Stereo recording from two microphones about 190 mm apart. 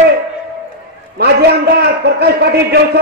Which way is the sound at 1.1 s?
60° right (ahead or behind).